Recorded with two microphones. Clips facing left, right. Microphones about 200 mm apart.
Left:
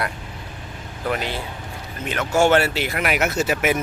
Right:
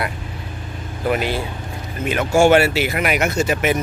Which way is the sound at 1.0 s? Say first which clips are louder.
Right 5 dB; 10° right (ahead or behind).